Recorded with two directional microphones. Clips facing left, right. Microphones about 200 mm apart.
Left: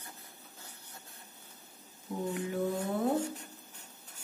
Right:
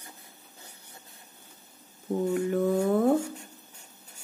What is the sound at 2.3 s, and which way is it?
Speech, 50° right (ahead or behind).